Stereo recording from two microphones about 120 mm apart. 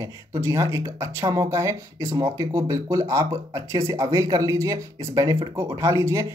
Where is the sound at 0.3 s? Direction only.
25° right (ahead or behind).